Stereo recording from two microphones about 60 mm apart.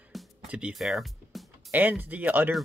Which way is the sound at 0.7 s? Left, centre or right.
Centre.